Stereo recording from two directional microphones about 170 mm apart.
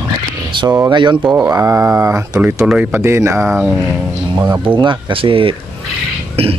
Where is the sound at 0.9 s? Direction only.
25° right (ahead or behind).